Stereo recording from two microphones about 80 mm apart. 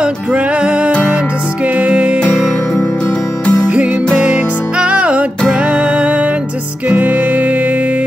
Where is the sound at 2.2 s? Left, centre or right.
Centre.